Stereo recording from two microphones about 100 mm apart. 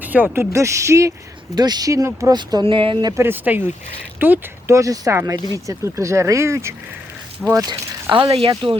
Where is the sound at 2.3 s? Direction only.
45° right (ahead or behind).